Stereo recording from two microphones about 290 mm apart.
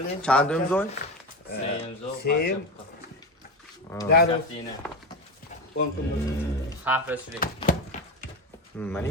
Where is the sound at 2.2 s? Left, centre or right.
Left.